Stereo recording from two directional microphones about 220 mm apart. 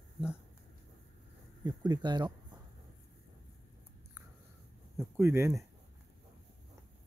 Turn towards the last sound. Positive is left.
turn(degrees=-10)  # may be behind; listen again after turning